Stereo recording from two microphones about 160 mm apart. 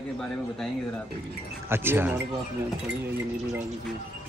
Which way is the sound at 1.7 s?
15° right (ahead or behind).